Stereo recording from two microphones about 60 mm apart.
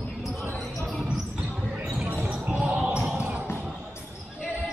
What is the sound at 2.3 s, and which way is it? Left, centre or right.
Basketball bounce, centre.